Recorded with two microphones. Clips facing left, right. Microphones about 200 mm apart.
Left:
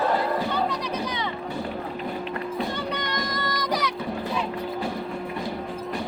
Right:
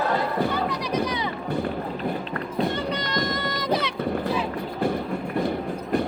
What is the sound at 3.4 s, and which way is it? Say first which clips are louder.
Child singing: right 2 dB; 25° right (ahead or behind).